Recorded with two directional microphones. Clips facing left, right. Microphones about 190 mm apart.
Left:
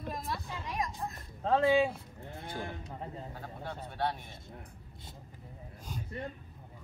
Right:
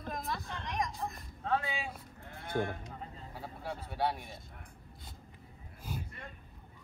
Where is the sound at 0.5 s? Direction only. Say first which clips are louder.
Even; 5° left (ahead or behind).